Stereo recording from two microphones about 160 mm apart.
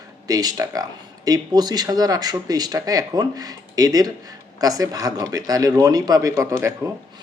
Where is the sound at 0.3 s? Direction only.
25° right (ahead or behind).